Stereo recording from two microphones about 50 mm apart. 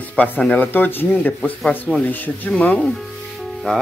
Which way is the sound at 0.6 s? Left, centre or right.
Left.